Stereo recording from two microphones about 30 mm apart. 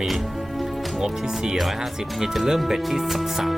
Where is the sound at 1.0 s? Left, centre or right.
Centre.